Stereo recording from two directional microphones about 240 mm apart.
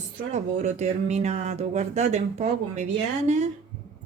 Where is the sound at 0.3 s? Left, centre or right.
Right.